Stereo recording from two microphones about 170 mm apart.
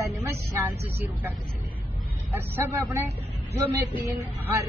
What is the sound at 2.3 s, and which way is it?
Speech, 10° right (ahead or behind).